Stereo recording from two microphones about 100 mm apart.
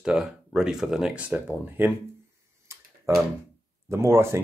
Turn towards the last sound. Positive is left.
turn(degrees=-25)  # may be behind; listen again after turning